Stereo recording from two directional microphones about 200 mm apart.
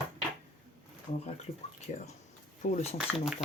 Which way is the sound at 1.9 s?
35° left (ahead or behind).